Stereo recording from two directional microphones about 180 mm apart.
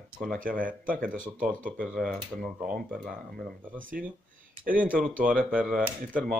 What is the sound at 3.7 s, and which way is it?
Speech, 50° right (ahead or behind).